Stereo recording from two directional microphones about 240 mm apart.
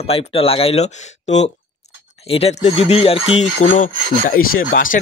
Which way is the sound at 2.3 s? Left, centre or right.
Left.